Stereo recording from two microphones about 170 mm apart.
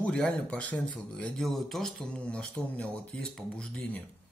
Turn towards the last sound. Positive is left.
turn(degrees=5)  # may be behind; listen again after turning